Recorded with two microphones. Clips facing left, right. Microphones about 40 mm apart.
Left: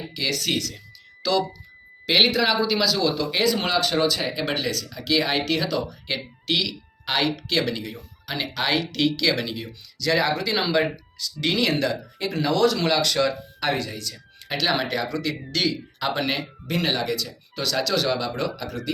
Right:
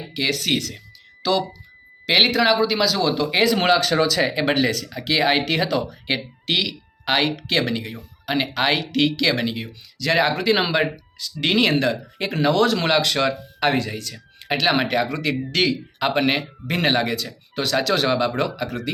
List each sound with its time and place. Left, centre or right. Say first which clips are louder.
0.1 s speech: right 4 dB; right; by 3.1 s centre
3.1 s speech: right 4 dB; right
3.4 s speech: right 5 dB; right
4.4 s speech: right 6 dB; right
9.5 s speech: right 3 dB; right